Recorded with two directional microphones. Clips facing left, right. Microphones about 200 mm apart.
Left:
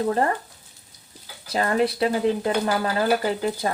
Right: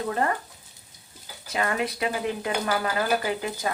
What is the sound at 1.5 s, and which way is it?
Speech, 35° left (ahead or behind).